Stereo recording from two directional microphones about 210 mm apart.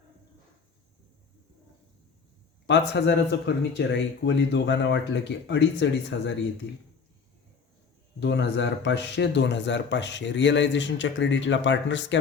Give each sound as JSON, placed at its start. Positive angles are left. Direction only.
{"t": 2.6, "sound": "speech", "side_deg": 55}
{"t": 8.2, "sound": "speech", "side_deg": 55}